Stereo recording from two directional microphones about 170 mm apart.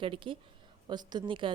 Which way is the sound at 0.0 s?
30° right (ahead or behind).